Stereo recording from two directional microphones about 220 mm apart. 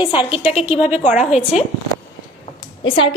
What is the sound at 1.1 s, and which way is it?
Speech, 30° left (ahead or behind).